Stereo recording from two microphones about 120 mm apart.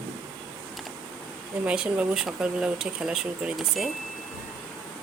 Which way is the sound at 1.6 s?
10° right (ahead or behind).